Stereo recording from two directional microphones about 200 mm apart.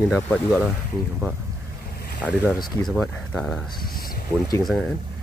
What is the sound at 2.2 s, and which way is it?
Speech, 5° left (ahead or behind).